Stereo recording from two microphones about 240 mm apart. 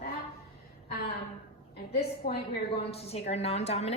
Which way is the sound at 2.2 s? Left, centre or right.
Left.